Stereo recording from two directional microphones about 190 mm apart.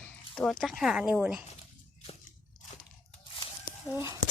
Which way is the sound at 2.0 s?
40° left (ahead or behind).